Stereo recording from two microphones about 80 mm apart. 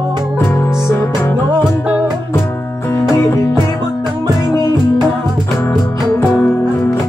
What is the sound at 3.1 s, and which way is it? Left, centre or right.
Music, left.